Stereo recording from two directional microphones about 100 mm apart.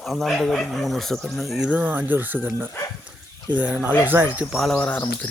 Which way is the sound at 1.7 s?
20° right (ahead or behind).